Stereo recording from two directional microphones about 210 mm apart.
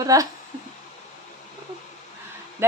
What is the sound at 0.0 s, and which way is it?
Speech, 15° right (ahead or behind).